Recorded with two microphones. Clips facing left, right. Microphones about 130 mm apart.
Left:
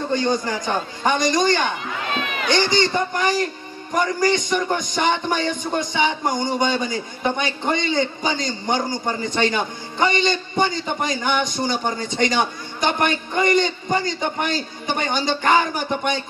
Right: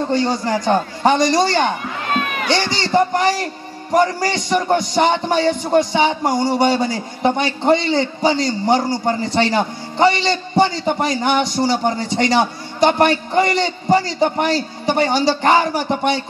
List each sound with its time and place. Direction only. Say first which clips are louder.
0.1 s a man's voice: right 1 dB; 30° right (ahead or behind)
2.1 s a sound: right 8 dB; 50° right (ahead or behind)
2.4 s a man's voice: left 1 dB; 30° right (ahead or behind)